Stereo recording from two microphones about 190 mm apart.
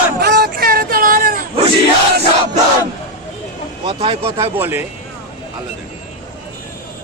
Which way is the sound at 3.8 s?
30° right (ahead or behind).